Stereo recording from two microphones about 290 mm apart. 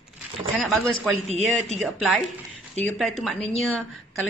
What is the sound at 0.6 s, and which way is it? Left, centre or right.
A man's voice, centre.